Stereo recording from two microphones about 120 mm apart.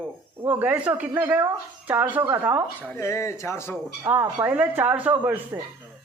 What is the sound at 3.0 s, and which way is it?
Speech, 25° left (ahead or behind).